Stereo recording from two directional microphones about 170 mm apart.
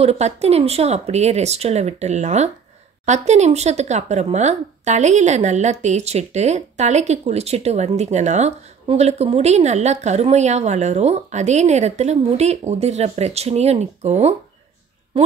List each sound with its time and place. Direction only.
0.0 s speech: 40° right (ahead or behind)